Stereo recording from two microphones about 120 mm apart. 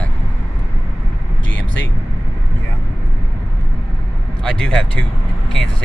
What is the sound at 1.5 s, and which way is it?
Vehicle, 15° left (ahead or behind).